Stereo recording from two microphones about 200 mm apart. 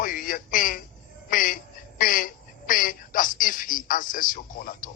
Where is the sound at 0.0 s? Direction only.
45° left (ahead or behind).